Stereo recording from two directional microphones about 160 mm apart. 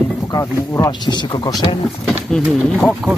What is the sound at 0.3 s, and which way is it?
Speech, 20° left (ahead or behind).